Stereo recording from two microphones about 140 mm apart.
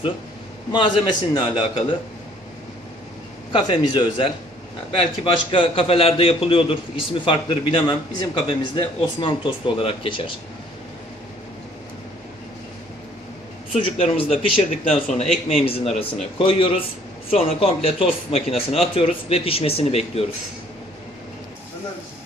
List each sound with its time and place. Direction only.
0.7 s a man's voice: 35° left (ahead or behind)
3.5 s a man's voice: 35° left (ahead or behind)
13.7 s a man's voice: 40° left (ahead or behind)